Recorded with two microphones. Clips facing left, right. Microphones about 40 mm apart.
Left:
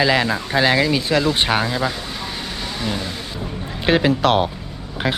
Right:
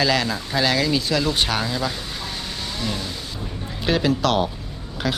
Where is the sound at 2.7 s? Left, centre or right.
Centre.